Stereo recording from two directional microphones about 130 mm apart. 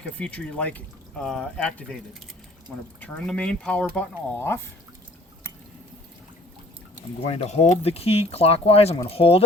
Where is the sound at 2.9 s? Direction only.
10° left (ahead or behind).